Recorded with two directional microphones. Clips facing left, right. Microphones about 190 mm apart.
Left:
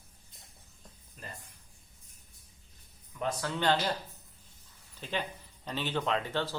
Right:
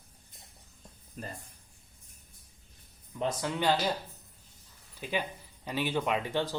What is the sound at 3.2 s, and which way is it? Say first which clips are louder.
Speech: right 2 dB; 20° right (ahead or behind).